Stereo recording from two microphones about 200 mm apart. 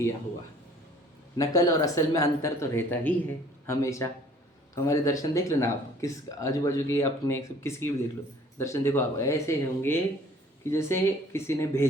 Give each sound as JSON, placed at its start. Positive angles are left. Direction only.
{"t": 1.4, "sound": "speech", "side_deg": 15}